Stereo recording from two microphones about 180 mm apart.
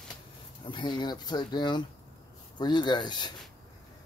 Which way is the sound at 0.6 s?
25° left (ahead or behind).